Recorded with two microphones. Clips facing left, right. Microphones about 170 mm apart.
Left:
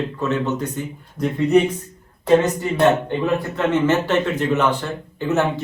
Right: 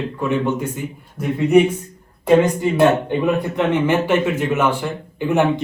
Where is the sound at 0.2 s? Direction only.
10° right (ahead or behind).